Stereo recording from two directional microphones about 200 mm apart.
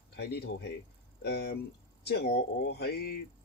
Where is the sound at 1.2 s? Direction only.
55° left (ahead or behind).